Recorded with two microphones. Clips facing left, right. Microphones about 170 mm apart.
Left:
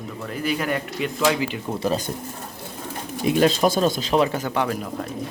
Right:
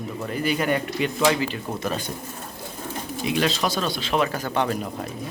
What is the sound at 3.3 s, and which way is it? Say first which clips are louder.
Speech: left 6 dB; 45° left (ahead or behind).